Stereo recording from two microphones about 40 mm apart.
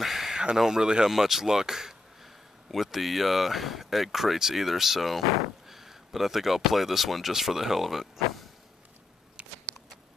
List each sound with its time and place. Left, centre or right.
0.0 s a sound: centre
0.6 s speech: centre
1.1 s speech: centre